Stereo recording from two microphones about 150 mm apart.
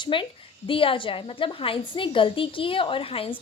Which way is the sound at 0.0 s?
35° left (ahead or behind).